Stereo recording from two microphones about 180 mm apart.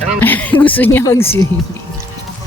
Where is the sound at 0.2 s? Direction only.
10° left (ahead or behind).